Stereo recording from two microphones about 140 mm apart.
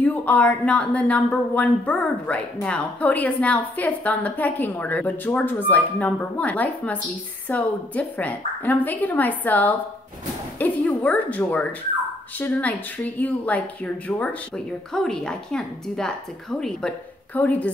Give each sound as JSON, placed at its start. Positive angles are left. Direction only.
{"t": 0.0, "sound": "a woman's voice", "side_deg": 10}